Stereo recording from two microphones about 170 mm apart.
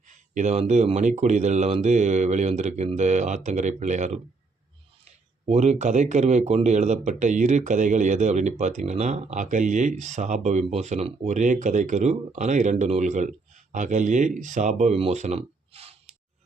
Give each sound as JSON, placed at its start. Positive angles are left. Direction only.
{"t": 0.1, "sound": "speech", "side_deg": -45}
{"t": 5.5, "sound": "speech", "side_deg": -40}